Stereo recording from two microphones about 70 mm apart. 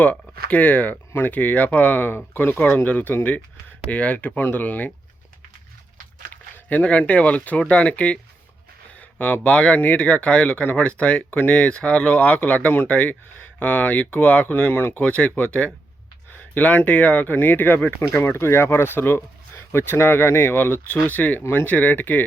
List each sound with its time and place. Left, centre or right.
0.0 s speech: left
6.3 s speech: left
15.0 s speech: centre
16.6 s speech: left
18.1 s speech: left